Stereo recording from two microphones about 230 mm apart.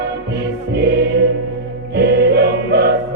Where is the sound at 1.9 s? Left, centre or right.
Right.